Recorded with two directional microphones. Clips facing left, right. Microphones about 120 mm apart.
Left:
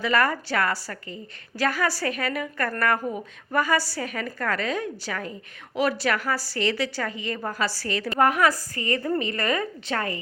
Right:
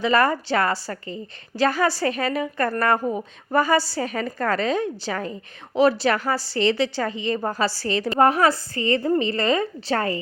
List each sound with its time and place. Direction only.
0.0 s a woman's voice: 25° right (ahead or behind)